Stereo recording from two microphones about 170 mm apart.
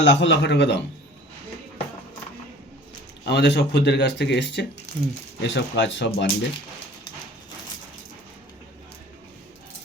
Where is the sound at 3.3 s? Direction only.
80° left.